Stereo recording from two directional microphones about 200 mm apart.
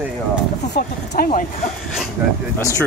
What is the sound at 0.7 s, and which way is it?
Speech, 50° left (ahead or behind).